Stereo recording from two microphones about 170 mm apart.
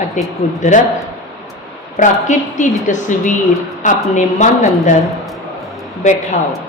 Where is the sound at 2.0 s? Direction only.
45° left (ahead or behind).